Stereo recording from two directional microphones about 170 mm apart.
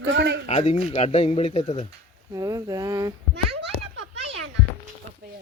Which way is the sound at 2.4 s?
20° right (ahead or behind).